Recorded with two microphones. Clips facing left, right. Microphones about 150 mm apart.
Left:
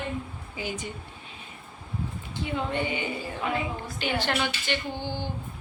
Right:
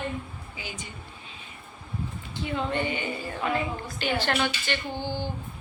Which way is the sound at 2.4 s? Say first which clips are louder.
Right 1 dB; 15° left (ahead or behind).